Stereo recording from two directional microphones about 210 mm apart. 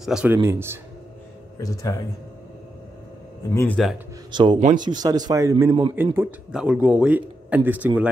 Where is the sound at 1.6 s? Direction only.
15° left (ahead or behind).